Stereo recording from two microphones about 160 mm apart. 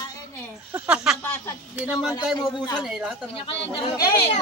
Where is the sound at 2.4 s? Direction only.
25° left (ahead or behind).